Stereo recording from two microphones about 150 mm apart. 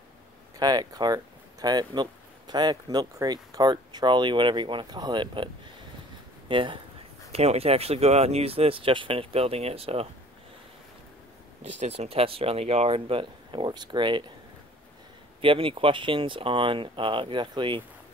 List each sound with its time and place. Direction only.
0.6 s speech: 25° right (ahead or behind)
6.5 s speech: 35° right (ahead or behind)
11.8 s speech: 45° right (ahead or behind)
15.4 s speech: 35° right (ahead or behind)